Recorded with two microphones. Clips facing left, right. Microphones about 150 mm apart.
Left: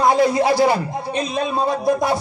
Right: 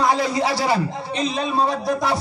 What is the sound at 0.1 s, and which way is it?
Speech, 50° left (ahead or behind).